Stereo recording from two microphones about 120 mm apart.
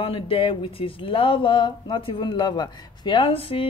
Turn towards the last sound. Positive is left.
turn(degrees=50)  # may be behind; listen again after turning